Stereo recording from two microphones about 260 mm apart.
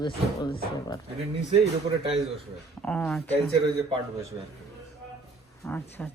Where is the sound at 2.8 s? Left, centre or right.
Centre.